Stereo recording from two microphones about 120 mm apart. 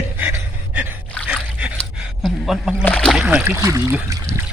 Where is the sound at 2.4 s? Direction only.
5° right (ahead or behind).